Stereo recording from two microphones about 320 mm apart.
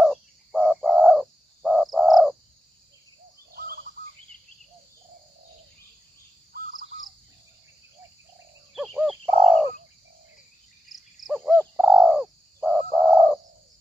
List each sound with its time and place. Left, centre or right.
0.0 s bird: centre
3.5 s bird: right
8.7 s a sound: centre
10.9 s bird: centre